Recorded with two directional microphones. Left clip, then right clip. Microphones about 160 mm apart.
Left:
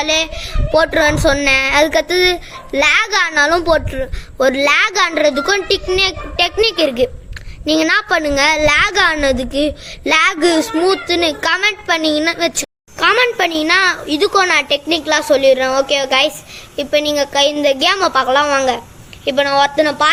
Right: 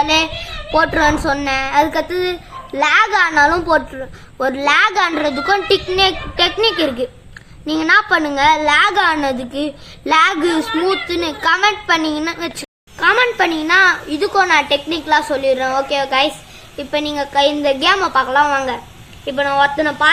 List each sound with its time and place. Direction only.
0.7 s speech: 50° left (ahead or behind)
0.9 s a woman's voice: 35° left (ahead or behind)